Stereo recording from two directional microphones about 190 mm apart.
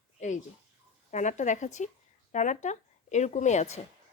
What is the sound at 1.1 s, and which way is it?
Speech, 40° left (ahead or behind).